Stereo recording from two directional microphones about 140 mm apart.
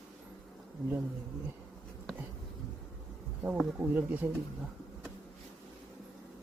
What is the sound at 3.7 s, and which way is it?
Speech, 10° right (ahead or behind).